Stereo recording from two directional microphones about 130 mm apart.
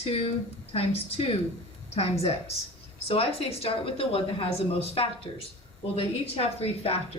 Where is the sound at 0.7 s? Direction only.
50° left (ahead or behind).